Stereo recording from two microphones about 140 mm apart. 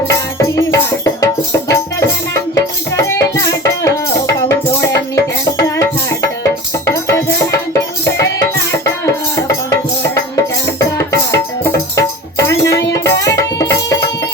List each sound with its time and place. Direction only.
0.1 s music: 20° left (ahead or behind)